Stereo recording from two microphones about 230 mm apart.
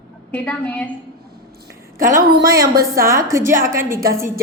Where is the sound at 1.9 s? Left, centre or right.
Right.